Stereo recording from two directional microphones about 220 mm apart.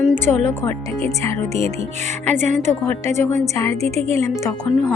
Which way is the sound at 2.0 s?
35° right (ahead or behind).